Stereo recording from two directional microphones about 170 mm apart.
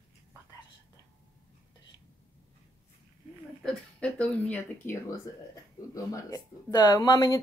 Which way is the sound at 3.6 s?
5° left (ahead or behind).